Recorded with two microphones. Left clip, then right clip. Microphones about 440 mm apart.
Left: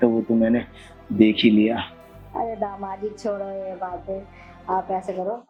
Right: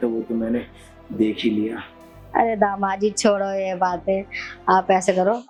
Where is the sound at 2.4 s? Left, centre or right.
Right.